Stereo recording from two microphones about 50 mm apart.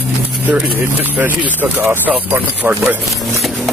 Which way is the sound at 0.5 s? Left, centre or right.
Right.